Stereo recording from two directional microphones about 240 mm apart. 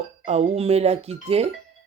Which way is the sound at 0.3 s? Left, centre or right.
Right.